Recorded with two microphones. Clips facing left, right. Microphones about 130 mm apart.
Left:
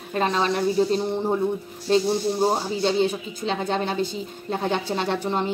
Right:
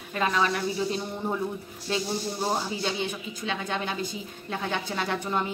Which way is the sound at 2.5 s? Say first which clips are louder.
Left 6 dB; 35° left (ahead or behind).